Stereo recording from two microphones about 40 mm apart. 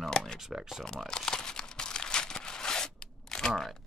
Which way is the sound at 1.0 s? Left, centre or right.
Centre.